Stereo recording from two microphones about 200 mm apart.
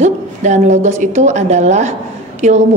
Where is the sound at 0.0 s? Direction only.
35° right (ahead or behind).